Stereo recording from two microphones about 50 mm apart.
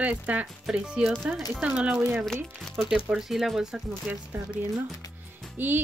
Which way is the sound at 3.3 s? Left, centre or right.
Centre.